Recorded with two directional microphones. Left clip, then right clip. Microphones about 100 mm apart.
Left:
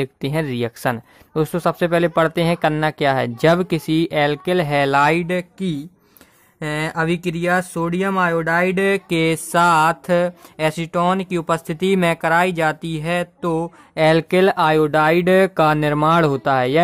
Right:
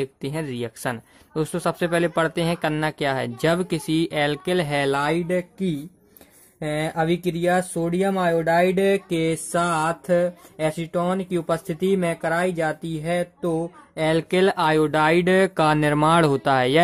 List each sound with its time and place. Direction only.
0.0 s speech: 35° left (ahead or behind); by 9.3 s 55° left (ahead or behind)
9.5 s speech: 35° left (ahead or behind); by 16.8 s 15° left (ahead or behind)